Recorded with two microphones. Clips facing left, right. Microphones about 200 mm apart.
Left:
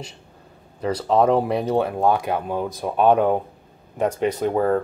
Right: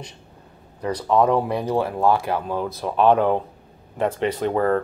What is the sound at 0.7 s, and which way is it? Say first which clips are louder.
Speech: left 1 dB; 25° left (ahead or behind).